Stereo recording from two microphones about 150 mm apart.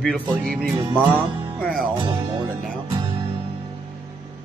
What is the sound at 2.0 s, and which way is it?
Music, 30° right (ahead or behind).